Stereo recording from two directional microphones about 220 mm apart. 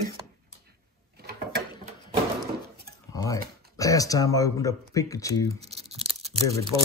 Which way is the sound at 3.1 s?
15° left (ahead or behind).